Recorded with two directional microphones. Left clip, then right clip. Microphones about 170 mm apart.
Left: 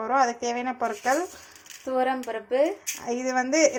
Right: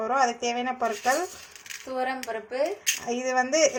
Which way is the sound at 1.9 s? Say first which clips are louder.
Left 4 dB; 50° left (ahead or behind).